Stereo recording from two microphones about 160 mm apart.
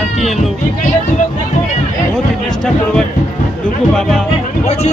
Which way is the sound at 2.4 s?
5° left (ahead or behind).